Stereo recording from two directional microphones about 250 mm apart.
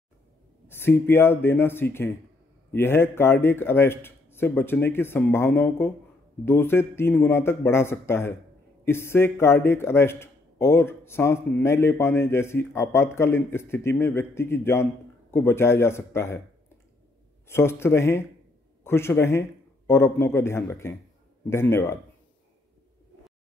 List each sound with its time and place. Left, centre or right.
0.7 s speech: centre